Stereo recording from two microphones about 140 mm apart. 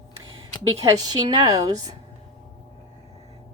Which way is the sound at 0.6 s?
25° right (ahead or behind).